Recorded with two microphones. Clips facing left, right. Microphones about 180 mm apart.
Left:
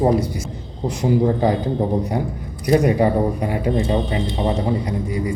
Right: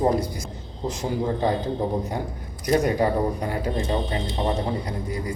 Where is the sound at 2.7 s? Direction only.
10° left (ahead or behind).